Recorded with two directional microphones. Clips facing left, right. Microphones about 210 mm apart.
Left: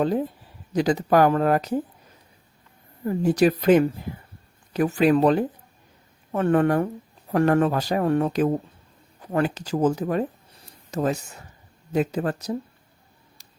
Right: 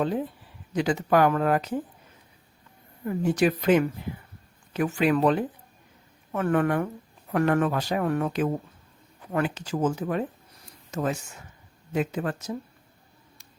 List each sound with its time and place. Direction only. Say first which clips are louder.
0.7 s speech: left 3 dB; 40° left (ahead or behind)
3.1 s speech: left 4 dB; 40° left (ahead or behind)